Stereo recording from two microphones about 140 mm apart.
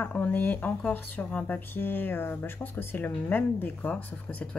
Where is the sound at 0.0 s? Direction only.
10° left (ahead or behind).